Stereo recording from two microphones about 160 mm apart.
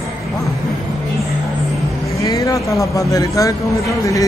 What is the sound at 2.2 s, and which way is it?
Speech, 20° left (ahead or behind).